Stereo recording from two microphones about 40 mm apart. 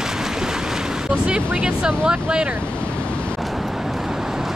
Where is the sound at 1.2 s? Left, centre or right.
Right.